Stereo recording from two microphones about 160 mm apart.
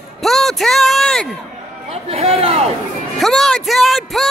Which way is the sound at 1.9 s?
40° right (ahead or behind).